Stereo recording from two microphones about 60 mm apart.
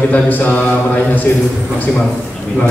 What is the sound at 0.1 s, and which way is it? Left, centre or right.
Speech, left.